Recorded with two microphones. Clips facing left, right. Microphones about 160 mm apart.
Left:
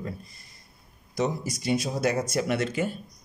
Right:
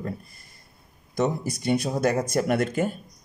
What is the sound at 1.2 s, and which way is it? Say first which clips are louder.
Speech: right 3 dB; 60° right (ahead or behind).